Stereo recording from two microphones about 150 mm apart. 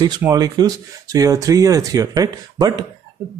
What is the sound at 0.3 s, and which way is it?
Speech, 25° right (ahead or behind).